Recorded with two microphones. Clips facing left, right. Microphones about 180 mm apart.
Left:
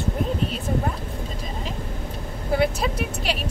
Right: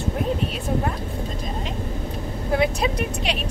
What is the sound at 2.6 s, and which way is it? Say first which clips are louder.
Speech: right 1 dB; 5° left (ahead or behind).